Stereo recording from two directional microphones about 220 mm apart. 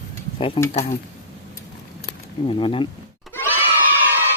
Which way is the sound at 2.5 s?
25° left (ahead or behind).